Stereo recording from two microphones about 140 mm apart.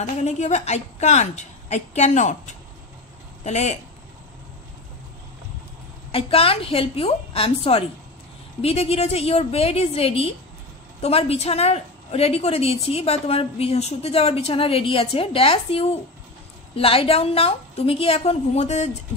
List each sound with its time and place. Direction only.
0.0 s a woman's voice: 55° left (ahead or behind)
6.1 s a woman's voice: 40° left (ahead or behind)